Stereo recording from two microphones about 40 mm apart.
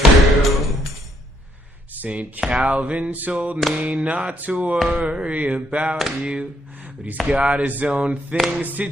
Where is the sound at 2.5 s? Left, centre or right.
Right.